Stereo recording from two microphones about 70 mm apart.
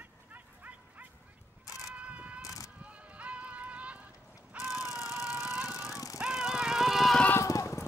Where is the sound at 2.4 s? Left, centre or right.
Left.